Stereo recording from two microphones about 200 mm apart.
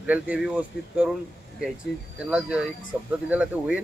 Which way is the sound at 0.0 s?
5° right (ahead or behind).